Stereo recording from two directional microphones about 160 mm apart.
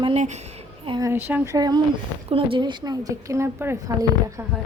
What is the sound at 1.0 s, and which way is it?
A woman's voice, 15° right (ahead or behind).